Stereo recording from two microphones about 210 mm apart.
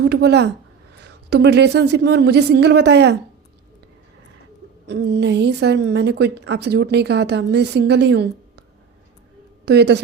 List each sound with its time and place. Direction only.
0.0 s a woman's voice: 50° right (ahead or behind)
4.9 s a woman's voice: 55° right (ahead or behind)
9.6 s a woman's voice: 55° right (ahead or behind)